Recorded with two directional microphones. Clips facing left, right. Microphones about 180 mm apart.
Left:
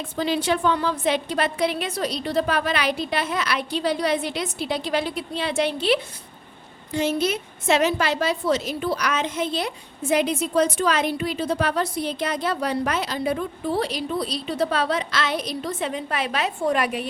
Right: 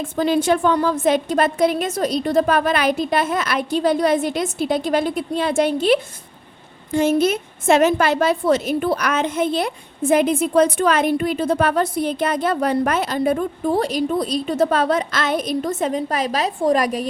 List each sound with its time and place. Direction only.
0.0 s a woman's voice: 50° right (ahead or behind)